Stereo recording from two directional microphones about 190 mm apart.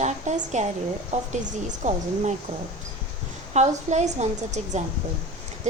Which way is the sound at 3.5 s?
35° right (ahead or behind).